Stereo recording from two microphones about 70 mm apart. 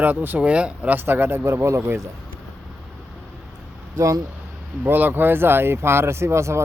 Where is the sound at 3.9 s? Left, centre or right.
Right.